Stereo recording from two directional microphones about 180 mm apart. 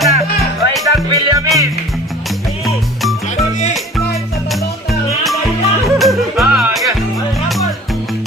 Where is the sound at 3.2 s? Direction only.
40° left (ahead or behind).